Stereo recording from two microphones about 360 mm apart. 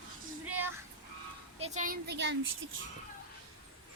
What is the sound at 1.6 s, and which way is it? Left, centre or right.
Speech, right.